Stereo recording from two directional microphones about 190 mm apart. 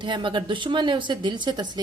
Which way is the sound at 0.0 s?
25° right (ahead or behind).